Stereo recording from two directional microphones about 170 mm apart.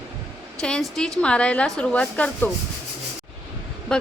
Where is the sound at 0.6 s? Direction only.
5° left (ahead or behind).